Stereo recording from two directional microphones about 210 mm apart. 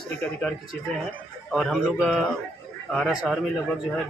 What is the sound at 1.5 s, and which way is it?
A man's voice, centre (ahead or behind).